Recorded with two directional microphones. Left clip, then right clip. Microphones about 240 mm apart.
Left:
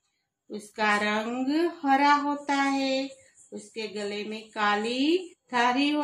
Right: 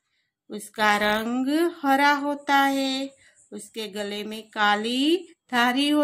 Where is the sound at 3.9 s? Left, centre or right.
Right.